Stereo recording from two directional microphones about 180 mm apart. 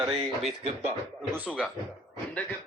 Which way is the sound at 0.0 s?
25° right (ahead or behind).